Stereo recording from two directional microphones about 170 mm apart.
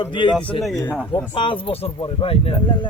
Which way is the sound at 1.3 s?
30° left (ahead or behind).